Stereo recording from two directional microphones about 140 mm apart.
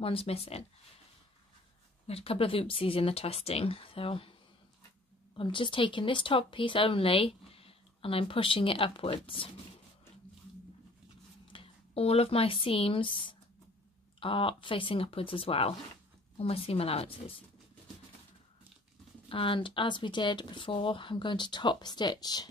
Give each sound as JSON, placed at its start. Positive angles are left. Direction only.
{"t": 0.0, "sound": "speech", "side_deg": 45}
{"t": 2.0, "sound": "speech", "side_deg": 45}
{"t": 5.3, "sound": "speech", "side_deg": 35}
{"t": 11.5, "sound": "speech", "side_deg": 40}
{"t": 19.2, "sound": "speech", "side_deg": 40}